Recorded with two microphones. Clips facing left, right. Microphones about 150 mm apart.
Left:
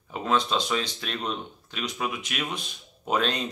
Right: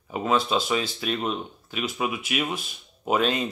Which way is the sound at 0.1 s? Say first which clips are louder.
Right 2 dB; 5° right (ahead or behind).